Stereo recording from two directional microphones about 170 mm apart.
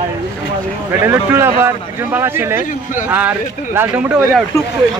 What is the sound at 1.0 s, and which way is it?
Speech, 15° right (ahead or behind).